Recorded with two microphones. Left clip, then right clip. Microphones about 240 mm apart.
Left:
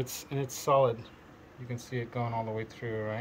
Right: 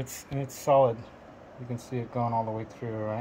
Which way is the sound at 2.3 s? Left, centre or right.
Right.